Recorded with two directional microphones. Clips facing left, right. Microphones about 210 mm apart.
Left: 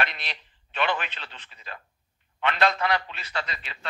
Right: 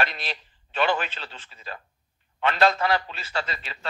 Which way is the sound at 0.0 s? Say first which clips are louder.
Right 3 dB; 35° right (ahead or behind).